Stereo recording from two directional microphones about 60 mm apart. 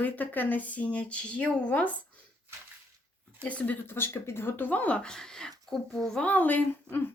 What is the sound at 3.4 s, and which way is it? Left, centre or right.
Speech, left.